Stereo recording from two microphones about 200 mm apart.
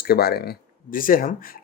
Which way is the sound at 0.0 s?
50° left (ahead or behind).